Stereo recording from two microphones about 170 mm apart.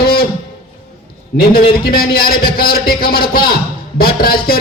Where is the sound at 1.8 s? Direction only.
65° left (ahead or behind).